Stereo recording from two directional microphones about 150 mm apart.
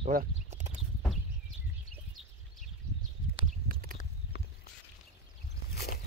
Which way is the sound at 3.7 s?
70° right (ahead or behind).